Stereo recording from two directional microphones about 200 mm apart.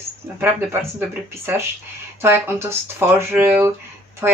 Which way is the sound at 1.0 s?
10° right (ahead or behind).